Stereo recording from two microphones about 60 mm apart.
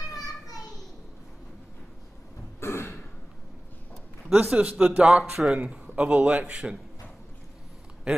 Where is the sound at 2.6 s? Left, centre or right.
Left.